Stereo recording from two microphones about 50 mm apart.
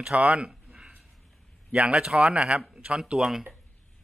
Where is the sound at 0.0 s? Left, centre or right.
Right.